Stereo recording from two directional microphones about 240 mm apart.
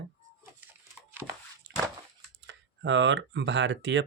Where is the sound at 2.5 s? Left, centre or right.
Right.